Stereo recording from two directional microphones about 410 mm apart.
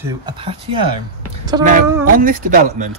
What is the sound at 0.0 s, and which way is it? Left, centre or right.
Speech, centre.